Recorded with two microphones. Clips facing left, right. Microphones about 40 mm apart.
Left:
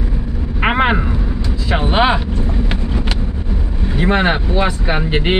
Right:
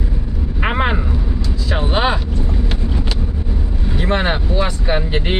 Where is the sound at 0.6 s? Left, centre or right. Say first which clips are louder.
Left 4 dB; left.